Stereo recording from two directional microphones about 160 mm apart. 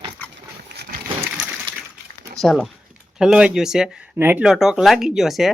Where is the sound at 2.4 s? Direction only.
Centre (ahead or behind).